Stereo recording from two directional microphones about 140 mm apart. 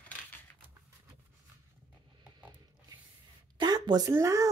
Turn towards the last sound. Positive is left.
turn(degrees=-20)  # may be behind; listen again after turning